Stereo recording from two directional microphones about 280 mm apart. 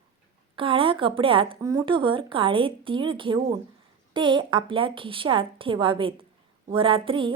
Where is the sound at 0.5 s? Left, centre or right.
Centre.